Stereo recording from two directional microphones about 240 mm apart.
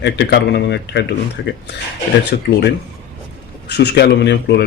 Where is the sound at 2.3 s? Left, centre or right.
Left.